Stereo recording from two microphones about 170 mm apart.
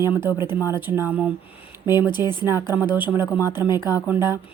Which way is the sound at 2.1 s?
25° left (ahead or behind).